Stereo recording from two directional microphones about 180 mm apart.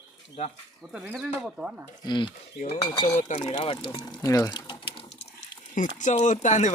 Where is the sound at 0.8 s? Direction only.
10° right (ahead or behind).